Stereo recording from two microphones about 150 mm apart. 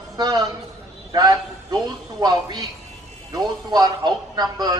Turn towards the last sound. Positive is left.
turn(degrees=-25)  # may be behind; listen again after turning